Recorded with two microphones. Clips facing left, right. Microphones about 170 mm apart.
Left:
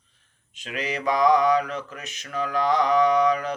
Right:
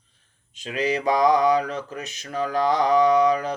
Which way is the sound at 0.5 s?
30° right (ahead or behind).